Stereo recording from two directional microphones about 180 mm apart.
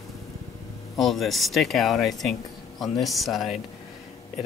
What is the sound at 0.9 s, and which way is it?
Speech, centre (ahead or behind).